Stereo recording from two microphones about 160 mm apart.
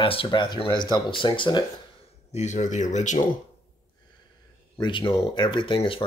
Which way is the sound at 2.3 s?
45° left (ahead or behind).